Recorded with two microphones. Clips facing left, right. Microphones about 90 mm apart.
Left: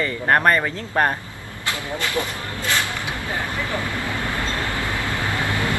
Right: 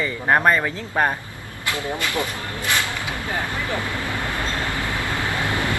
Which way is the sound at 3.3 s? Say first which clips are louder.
Even; 20° right (ahead or behind).